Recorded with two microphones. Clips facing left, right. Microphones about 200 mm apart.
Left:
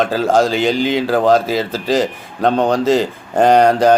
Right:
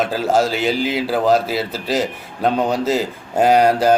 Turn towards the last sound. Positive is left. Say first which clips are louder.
# left 3 dB
turn(degrees=-5)  # may be behind; listen again after turning